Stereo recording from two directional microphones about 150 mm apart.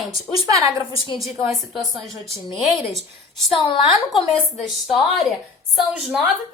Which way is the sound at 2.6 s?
Centre (ahead or behind).